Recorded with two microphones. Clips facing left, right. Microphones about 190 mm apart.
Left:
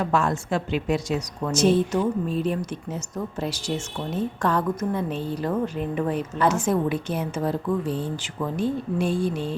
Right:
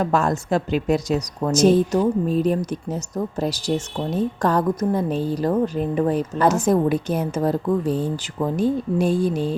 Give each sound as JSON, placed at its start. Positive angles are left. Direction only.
{"t": 0.0, "sound": "speech", "side_deg": -40}